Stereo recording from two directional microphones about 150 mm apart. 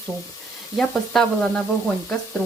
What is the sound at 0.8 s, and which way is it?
Speech, 5° left (ahead or behind).